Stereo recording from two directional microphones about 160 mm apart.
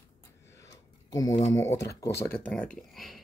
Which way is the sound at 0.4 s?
20° left (ahead or behind).